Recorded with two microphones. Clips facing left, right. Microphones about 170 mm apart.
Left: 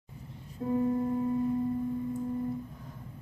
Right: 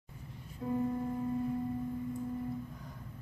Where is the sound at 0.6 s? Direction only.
25° left (ahead or behind).